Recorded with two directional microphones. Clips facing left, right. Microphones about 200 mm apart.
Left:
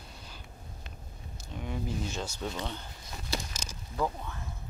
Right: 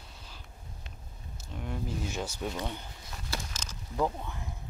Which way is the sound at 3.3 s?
10° left (ahead or behind).